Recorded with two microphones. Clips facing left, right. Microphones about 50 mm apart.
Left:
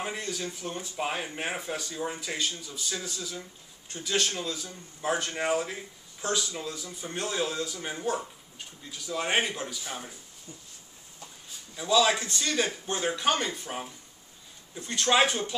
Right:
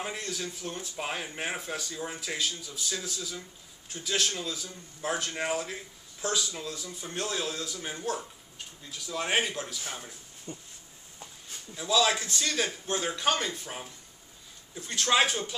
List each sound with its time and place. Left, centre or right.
0.0 s speech: centre
10.5 s a sound: right
11.7 s speech: centre